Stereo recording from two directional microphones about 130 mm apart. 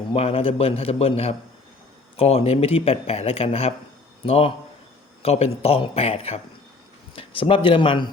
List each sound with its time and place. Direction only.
0.1 s speech: 50° left (ahead or behind)